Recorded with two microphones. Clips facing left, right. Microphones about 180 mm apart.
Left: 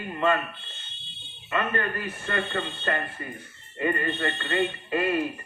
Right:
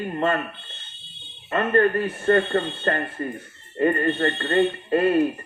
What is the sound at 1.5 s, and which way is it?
Speech, 45° right (ahead or behind).